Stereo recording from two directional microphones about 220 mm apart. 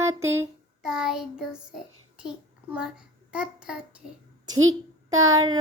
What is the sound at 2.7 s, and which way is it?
A child's voice, 5° right (ahead or behind).